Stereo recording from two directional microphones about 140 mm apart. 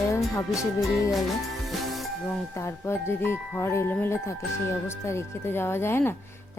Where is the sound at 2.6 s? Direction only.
20° left (ahead or behind).